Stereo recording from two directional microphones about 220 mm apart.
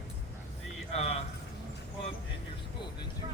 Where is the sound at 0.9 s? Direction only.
30° left (ahead or behind).